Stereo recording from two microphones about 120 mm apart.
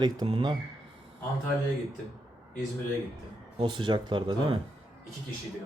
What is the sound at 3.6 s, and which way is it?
Speech, 40° right (ahead or behind).